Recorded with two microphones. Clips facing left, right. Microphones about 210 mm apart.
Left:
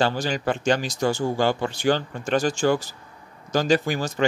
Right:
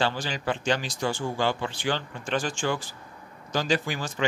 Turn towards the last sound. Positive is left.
turn(degrees=45)  # may be behind; listen again after turning